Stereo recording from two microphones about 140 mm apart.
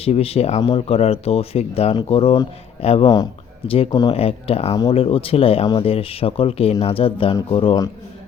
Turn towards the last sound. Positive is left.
turn(degrees=35)  # may be behind; listen again after turning